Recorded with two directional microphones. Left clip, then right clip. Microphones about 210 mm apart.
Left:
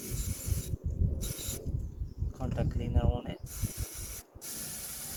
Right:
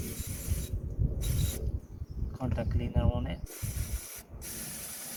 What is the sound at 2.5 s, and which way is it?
Speech, 35° left (ahead or behind).